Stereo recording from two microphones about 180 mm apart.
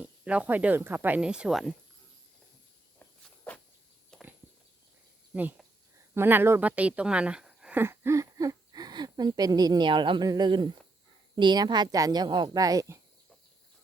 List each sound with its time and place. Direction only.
0.0 s speech: 5° right (ahead or behind)
3.0 s walk: 10° left (ahead or behind)
4.1 s a sound: 5° left (ahead or behind)
5.3 s speech: 10° right (ahead or behind)